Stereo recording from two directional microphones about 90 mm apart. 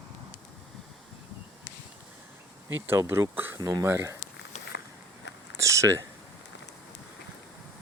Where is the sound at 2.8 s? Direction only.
30° right (ahead or behind).